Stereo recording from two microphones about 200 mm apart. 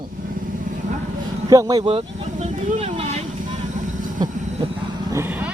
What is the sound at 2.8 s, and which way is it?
Vehicle, 30° right (ahead or behind).